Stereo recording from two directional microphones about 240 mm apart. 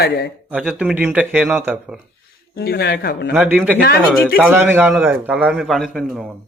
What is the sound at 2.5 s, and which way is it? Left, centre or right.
Speech, left.